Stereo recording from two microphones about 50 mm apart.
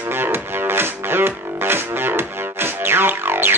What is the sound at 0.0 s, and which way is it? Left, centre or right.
Music, right.